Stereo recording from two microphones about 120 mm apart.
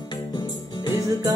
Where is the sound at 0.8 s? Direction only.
30° left (ahead or behind).